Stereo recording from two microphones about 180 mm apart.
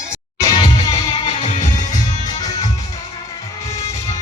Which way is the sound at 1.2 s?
35° left (ahead or behind).